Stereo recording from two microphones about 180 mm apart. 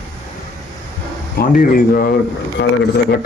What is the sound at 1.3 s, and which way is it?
Speech, 50° left (ahead or behind).